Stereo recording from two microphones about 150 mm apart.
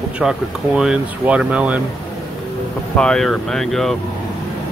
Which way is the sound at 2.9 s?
5° left (ahead or behind).